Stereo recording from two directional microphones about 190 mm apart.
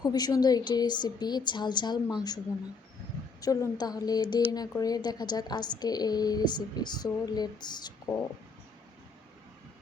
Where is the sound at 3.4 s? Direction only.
20° left (ahead or behind).